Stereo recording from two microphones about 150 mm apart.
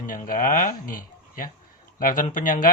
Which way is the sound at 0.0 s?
65° left (ahead or behind).